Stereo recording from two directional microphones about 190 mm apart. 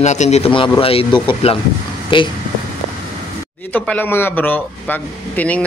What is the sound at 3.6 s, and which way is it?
Speech, 10° left (ahead or behind).